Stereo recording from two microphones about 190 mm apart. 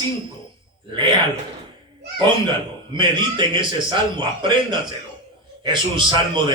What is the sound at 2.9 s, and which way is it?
A man's voice, 25° right (ahead or behind).